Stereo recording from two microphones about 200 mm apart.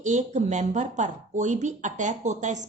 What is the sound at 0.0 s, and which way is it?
A woman's voice, 35° right (ahead or behind).